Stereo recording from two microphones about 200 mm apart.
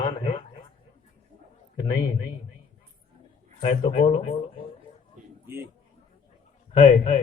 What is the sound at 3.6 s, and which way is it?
Speech, 30° left (ahead or behind).